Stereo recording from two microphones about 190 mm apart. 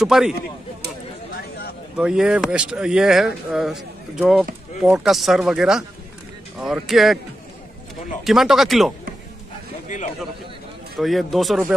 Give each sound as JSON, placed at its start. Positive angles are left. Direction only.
{"t": 0.0, "sound": "speech", "side_deg": 0}
{"t": 1.3, "sound": "a sound", "side_deg": 55}
{"t": 2.0, "sound": "speech", "side_deg": -5}
{"t": 8.2, "sound": "speech", "side_deg": 0}
{"t": 11.0, "sound": "speech", "side_deg": 0}